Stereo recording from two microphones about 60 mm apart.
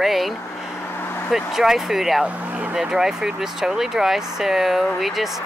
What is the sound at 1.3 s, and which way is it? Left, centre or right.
Speech, centre.